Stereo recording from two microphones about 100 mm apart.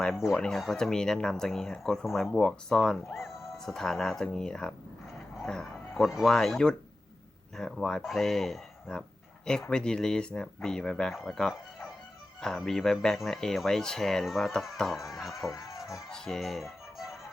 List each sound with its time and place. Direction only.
0.0 s speech: centre (ahead or behind)
15.4 s speech: 35° left (ahead or behind)
16.0 s speech: 5° left (ahead or behind)